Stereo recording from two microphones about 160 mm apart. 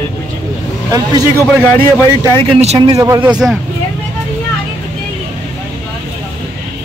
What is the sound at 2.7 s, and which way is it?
Speech, 20° right (ahead or behind).